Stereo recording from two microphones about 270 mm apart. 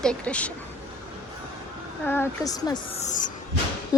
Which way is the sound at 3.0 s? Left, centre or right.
Left.